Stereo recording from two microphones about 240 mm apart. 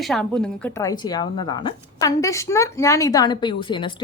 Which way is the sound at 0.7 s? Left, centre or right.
Centre.